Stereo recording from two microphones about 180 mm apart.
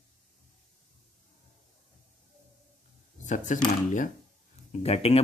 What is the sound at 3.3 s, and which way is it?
Speech, 45° left (ahead or behind).